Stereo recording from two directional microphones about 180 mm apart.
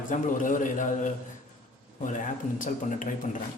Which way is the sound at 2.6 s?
45° left (ahead or behind).